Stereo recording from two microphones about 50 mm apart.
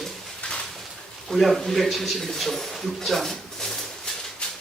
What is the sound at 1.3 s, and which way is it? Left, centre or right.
A man's voice, centre.